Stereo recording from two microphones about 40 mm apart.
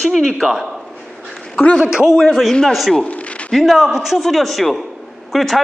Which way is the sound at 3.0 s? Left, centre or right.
Left.